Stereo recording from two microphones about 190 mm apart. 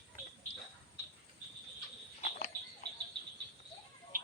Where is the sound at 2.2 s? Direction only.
50° left (ahead or behind).